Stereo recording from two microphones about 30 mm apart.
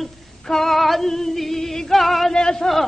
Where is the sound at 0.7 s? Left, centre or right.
Centre.